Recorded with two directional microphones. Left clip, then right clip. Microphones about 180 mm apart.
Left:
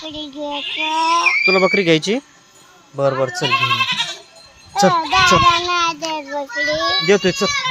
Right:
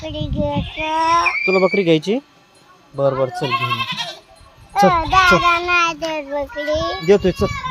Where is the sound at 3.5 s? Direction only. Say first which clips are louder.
Left 4 dB; 60° right (ahead or behind).